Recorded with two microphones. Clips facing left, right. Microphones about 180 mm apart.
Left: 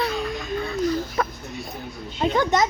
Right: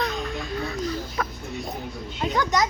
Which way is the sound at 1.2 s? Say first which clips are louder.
Left 4 dB; 30° left (ahead or behind).